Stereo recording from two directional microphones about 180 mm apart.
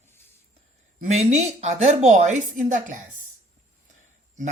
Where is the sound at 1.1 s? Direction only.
40° right (ahead or behind).